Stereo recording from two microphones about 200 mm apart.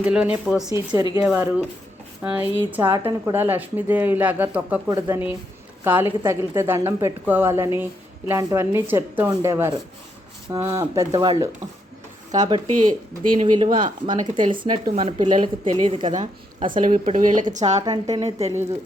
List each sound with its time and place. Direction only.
0.0 s a woman's voice: 5° right (ahead or behind); by 15.7 s 35° right (ahead or behind)
15.7 s speech: 25° right (ahead or behind)
16.1 s speech: 35° right (ahead or behind)
17.7 s a woman's voice: 20° right (ahead or behind)
18.2 s speech: 30° right (ahead or behind)